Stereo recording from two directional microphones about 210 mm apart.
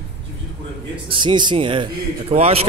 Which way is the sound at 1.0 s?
25° right (ahead or behind).